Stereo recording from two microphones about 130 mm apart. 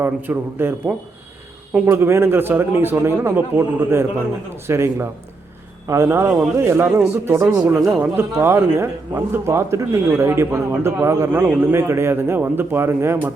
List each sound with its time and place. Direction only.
0.0 s a man's voice: 15° right (ahead or behind)